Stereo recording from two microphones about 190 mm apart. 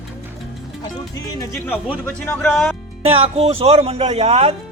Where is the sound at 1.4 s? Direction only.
10° left (ahead or behind).